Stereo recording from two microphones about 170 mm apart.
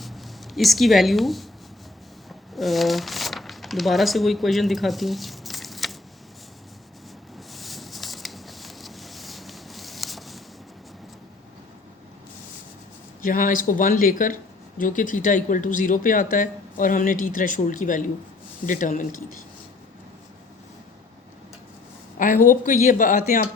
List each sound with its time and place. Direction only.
0.0 s speech: centre (ahead or behind)
2.6 s speech: centre (ahead or behind)
7.3 s a sound: centre (ahead or behind)
13.2 s speech: 55° left (ahead or behind)
22.2 s speech: 50° left (ahead or behind)